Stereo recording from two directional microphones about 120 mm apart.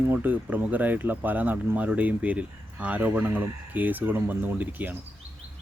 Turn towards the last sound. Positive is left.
turn(degrees=-15)  # may be behind; listen again after turning